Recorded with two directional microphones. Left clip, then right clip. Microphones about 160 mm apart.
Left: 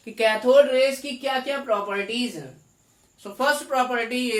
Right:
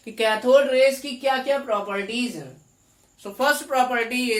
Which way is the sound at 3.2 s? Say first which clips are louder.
Right 1 dB; 35° right (ahead or behind).